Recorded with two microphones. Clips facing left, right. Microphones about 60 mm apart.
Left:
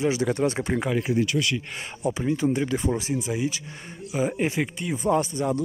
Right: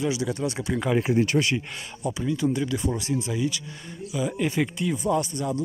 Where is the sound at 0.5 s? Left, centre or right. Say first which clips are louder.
Left 2 dB; left.